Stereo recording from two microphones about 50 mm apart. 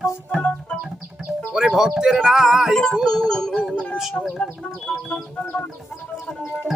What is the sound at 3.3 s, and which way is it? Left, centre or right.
Music, centre.